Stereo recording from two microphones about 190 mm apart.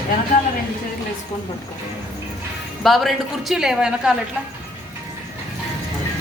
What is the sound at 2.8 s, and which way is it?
A woman's voice, centre (ahead or behind).